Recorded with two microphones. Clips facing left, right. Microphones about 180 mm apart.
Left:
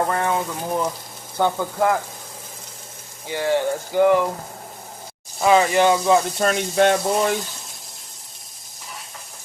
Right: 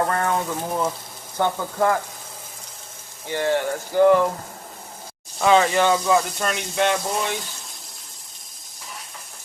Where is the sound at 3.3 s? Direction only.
15° left (ahead or behind).